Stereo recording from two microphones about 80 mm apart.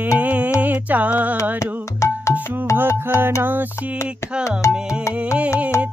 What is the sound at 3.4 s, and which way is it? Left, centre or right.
Music, right.